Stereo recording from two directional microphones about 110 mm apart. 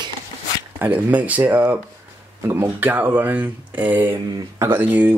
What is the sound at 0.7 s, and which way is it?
Speech, 15° right (ahead or behind).